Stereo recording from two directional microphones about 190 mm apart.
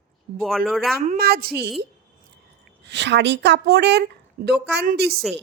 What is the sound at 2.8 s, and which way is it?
Speech, 65° right (ahead or behind).